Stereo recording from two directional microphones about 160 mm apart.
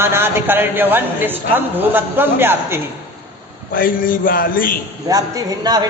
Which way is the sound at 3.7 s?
60° left (ahead or behind).